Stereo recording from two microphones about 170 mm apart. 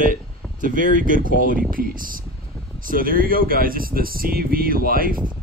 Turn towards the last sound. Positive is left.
turn(degrees=-60)  # may be behind; listen again after turning